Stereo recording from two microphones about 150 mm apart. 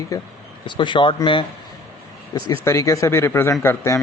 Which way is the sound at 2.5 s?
20° left (ahead or behind).